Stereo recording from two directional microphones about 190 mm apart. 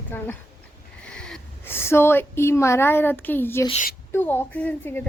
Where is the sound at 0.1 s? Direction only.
10° left (ahead or behind).